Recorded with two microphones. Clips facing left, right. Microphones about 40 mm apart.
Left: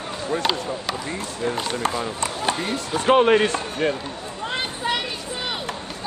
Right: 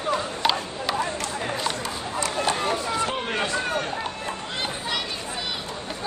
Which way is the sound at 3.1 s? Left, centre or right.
Left.